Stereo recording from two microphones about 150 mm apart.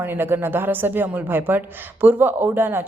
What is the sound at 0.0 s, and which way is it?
A woman's voice, 15° right (ahead or behind).